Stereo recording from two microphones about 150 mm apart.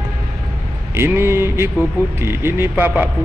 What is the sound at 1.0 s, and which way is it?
A man's voice, 15° right (ahead or behind).